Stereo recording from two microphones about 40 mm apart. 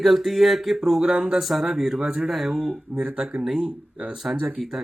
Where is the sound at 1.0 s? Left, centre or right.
Centre.